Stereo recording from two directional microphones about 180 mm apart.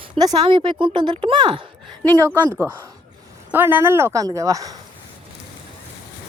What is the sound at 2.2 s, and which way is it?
A woman's voice, 15° right (ahead or behind).